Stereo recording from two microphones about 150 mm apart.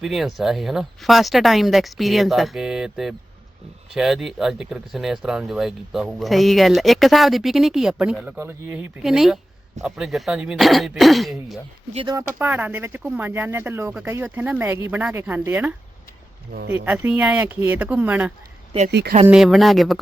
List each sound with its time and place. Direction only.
0.0 s speech: centre (ahead or behind)
8.4 s speech: 15° right (ahead or behind)
9.0 s speech: 5° right (ahead or behind)
12.1 s speech: 10° right (ahead or behind)
16.5 s speech: 90° right
16.7 s speech: 15° right (ahead or behind)
19.3 s speech: centre (ahead or behind)